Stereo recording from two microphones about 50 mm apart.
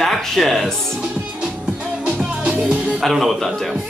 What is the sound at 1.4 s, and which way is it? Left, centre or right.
Music, right.